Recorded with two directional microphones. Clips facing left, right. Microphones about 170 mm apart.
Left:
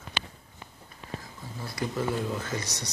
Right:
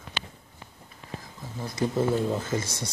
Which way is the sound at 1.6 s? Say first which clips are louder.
Right 5 dB; 25° right (ahead or behind).